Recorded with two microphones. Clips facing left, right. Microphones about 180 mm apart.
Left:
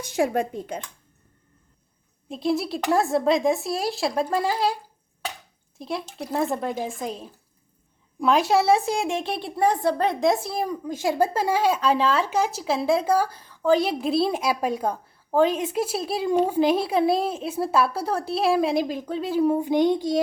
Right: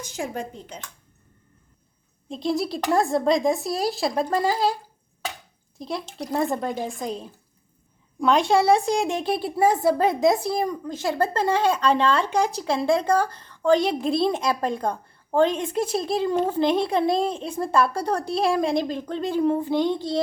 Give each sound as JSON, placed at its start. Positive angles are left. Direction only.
{"t": 0.1, "sound": "speech", "side_deg": 60}
{"t": 2.3, "sound": "a woman's voice", "side_deg": 0}
{"t": 5.8, "sound": "a woman's voice", "side_deg": 5}